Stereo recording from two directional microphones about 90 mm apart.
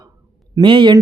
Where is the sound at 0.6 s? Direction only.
65° right (ahead or behind).